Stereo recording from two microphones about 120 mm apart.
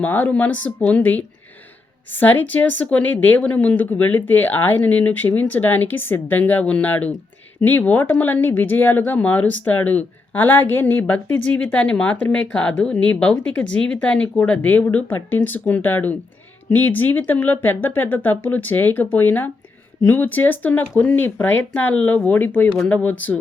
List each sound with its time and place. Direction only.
0.0 s speech: 15° left (ahead or behind)